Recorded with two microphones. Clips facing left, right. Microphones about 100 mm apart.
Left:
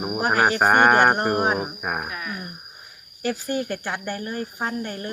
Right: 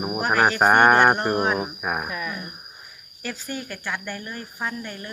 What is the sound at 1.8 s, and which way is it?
Insect, centre (ahead or behind).